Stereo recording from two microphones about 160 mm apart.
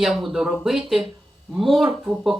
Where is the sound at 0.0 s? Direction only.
Centre (ahead or behind).